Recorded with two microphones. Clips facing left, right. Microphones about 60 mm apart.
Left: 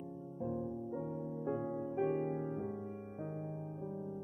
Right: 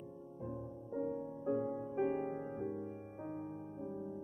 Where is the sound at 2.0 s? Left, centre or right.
Centre.